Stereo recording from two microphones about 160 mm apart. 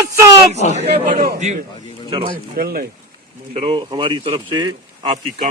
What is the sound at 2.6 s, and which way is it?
Speech, 70° right (ahead or behind).